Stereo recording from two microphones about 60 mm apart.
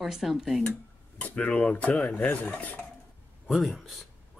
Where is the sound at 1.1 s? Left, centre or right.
Left.